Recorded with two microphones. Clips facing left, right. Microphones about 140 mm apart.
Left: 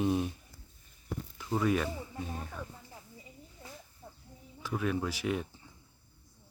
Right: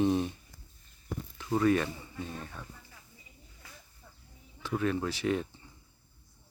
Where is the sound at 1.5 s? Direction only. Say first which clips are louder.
Right 3 dB; 5° left (ahead or behind).